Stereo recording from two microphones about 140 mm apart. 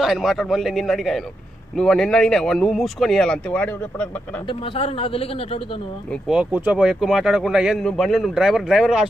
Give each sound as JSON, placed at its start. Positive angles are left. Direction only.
{"t": 0.0, "sound": "speech", "side_deg": 0}
{"t": 4.5, "sound": "a man's voice", "side_deg": 40}
{"t": 6.2, "sound": "speech", "side_deg": -10}